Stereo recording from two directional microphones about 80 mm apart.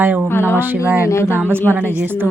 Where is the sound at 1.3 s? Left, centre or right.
Right.